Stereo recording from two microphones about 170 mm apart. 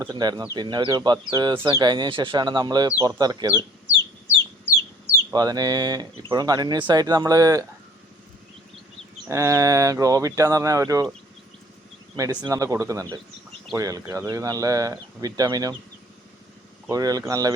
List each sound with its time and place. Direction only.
0.1 s speech: 25° right (ahead or behind)
5.3 s speech: 20° right (ahead or behind)
9.3 s speech: 15° right (ahead or behind)
12.1 s speech: 20° right (ahead or behind)
16.9 s speech: 20° right (ahead or behind)